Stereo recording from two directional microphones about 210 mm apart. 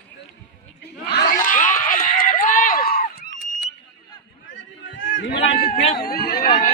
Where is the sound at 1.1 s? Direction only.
50° left (ahead or behind).